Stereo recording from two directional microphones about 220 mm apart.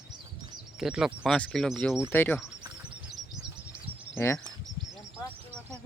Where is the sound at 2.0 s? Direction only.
10° left (ahead or behind).